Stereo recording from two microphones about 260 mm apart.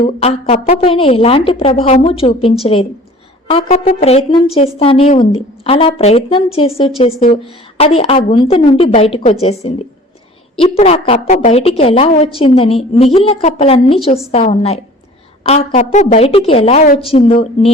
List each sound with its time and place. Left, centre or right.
0.0 s a woman's voice: left